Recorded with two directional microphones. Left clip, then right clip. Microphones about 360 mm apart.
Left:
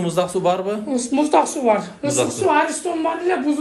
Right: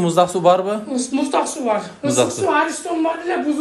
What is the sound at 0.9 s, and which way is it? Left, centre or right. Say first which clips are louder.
A woman's voice: left 5 dB; centre.